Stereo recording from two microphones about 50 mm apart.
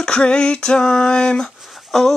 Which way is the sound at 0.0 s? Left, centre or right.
Centre.